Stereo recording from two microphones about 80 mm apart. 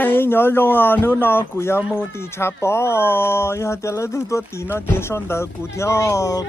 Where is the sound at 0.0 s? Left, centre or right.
Left.